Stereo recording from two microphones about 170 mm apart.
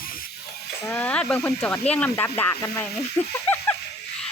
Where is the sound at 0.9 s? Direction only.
10° left (ahead or behind).